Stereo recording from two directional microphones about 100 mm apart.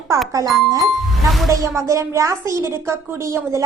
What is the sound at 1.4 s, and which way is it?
A woman's voice, 30° right (ahead or behind).